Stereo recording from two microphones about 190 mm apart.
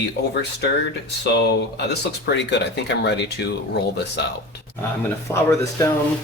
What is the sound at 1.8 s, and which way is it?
Speech, 60° left (ahead or behind).